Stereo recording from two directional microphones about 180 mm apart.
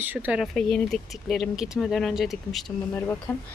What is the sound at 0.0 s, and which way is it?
Speech, 10° right (ahead or behind).